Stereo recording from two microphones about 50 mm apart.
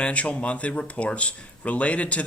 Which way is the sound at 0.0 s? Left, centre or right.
Left.